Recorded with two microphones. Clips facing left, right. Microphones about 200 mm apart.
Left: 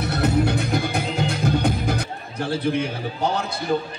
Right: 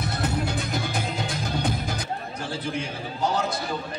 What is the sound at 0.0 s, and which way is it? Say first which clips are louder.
Music: left 7 dB; 65° left (ahead or behind).